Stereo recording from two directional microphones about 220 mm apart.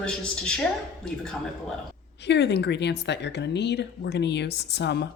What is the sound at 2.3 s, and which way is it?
Speech, 50° left (ahead or behind).